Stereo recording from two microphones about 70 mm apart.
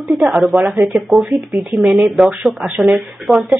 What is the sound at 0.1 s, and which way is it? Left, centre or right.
Speech, centre.